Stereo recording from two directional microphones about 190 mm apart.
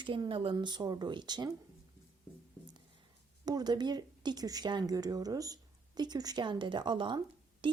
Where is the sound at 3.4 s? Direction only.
20° right (ahead or behind).